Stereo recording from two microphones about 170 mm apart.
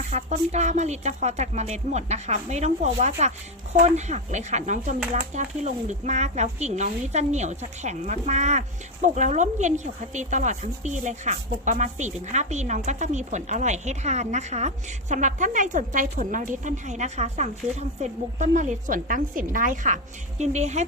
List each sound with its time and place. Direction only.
0.1 s speech: 45° right (ahead or behind)